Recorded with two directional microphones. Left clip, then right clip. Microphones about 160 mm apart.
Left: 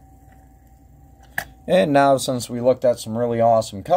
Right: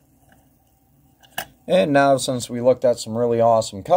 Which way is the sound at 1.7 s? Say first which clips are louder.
Even; 5° right (ahead or behind).